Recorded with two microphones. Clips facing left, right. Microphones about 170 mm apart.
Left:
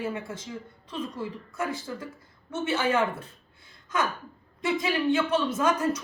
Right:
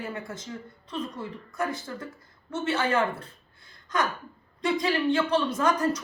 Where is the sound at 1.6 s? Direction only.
10° left (ahead or behind).